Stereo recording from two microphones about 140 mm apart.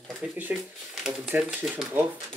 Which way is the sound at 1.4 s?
Centre (ahead or behind).